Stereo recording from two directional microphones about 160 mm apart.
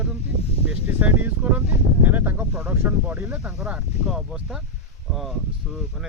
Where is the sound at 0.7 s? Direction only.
10° right (ahead or behind).